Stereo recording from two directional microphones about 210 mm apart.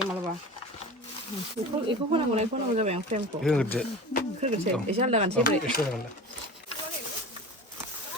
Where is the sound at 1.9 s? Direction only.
25° right (ahead or behind).